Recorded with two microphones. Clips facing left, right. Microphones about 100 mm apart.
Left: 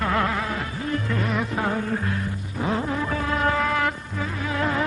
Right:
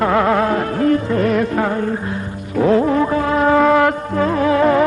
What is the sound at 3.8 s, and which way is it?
Music, 75° right (ahead or behind).